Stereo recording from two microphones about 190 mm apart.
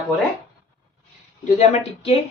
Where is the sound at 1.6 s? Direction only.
30° left (ahead or behind).